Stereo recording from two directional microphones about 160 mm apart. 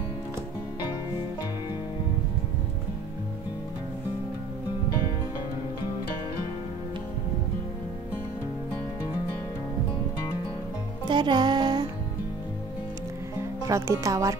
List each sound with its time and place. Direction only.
11.1 s music: 30° right (ahead or behind)
13.7 s speech: 20° right (ahead or behind)